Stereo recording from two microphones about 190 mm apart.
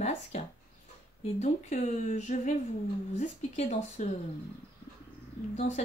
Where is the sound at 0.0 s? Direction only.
35° left (ahead or behind).